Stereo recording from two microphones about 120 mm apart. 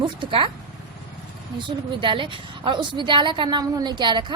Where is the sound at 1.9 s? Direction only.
45° right (ahead or behind).